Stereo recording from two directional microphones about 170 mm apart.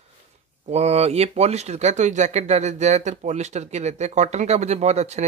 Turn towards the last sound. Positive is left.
turn(degrees=-40)  # may be behind; listen again after turning